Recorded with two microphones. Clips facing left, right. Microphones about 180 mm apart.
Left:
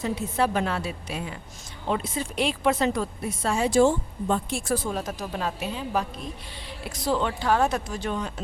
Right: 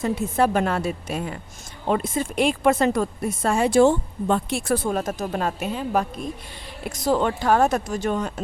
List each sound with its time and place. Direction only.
0.0 s a woman's voice: 50° right (ahead or behind)